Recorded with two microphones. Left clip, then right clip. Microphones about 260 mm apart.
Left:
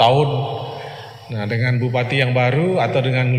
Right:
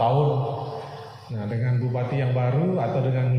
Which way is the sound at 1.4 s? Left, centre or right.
Left.